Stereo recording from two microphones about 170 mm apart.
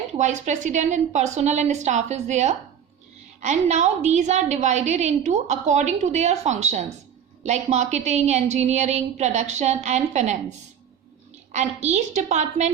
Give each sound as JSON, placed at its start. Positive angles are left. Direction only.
{"t": 0.1, "sound": "a woman's voice", "side_deg": -45}
{"t": 11.5, "sound": "a woman's voice", "side_deg": -40}